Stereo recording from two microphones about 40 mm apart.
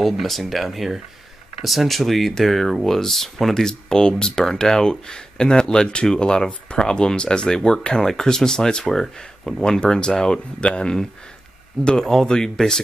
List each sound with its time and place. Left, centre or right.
0.0 s speech: centre